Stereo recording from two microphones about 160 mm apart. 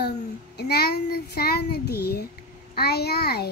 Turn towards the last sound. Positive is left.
turn(degrees=80)